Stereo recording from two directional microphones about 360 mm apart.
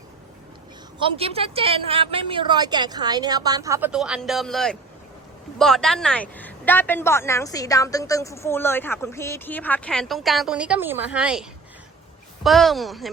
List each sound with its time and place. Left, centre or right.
1.0 s a woman's voice: centre